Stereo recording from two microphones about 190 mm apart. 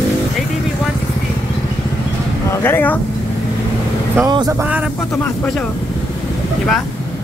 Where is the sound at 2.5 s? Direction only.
10° left (ahead or behind).